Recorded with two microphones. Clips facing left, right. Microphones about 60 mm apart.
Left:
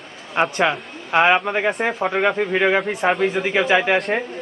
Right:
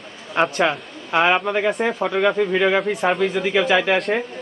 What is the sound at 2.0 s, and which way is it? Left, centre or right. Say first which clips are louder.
A man's voice: right 1 dB; left.